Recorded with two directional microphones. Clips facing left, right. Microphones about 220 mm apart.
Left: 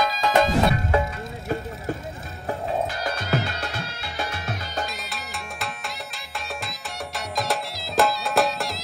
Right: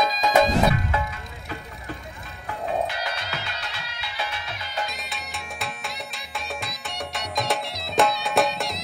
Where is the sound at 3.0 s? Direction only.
45° left (ahead or behind).